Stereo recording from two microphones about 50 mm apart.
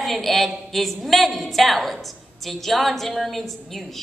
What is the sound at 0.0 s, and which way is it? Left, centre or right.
A woman's voice, centre.